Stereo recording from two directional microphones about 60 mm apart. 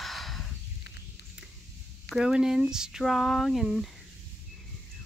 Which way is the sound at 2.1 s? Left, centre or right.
Centre.